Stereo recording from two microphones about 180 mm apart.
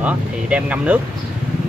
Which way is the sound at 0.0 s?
5° right (ahead or behind).